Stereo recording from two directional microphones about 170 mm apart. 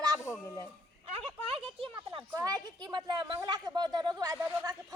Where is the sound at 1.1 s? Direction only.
35° right (ahead or behind).